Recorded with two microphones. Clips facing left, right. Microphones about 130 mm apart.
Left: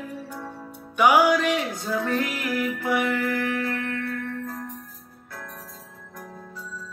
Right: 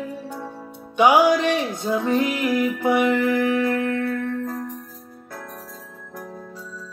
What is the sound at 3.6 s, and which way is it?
Music, 40° right (ahead or behind).